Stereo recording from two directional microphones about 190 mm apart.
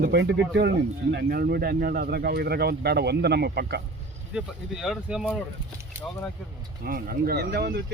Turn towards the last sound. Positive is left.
turn(degrees=-55)  # may be behind; listen again after turning